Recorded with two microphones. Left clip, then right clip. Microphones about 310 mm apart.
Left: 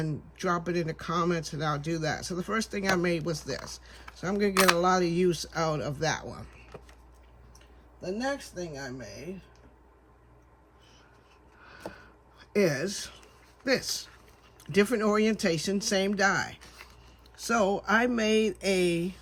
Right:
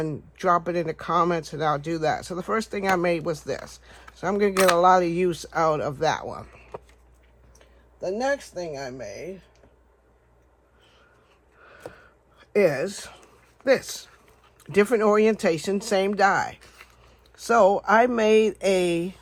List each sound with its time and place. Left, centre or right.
0.0 s speech: centre
8.0 s speech: right
11.6 s a sound: centre
14.6 s speech: centre
16.8 s biting: centre
17.3 s speech: centre